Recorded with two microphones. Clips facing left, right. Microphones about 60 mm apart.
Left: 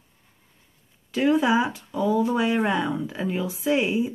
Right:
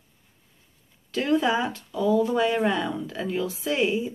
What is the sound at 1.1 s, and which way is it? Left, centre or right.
A woman's voice, centre.